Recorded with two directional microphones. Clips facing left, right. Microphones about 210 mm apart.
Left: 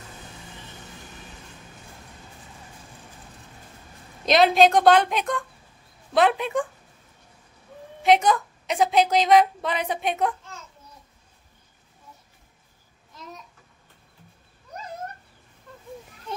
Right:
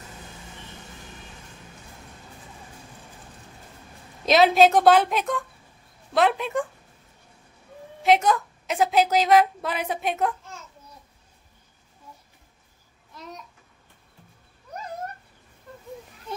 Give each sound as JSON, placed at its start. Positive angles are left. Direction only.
{"t": 4.3, "sound": "a woman's voice", "side_deg": -5}
{"t": 8.0, "sound": "a woman's voice", "side_deg": 0}